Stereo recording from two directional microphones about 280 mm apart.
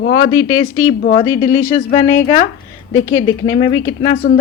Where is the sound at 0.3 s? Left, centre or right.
Left.